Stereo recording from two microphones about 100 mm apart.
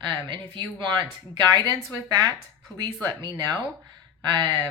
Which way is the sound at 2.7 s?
45° right (ahead or behind).